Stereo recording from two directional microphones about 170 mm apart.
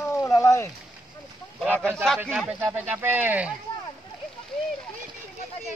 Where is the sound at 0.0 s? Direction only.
15° left (ahead or behind).